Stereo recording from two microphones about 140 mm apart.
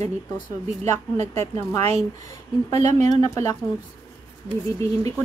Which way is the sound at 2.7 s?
55° right (ahead or behind).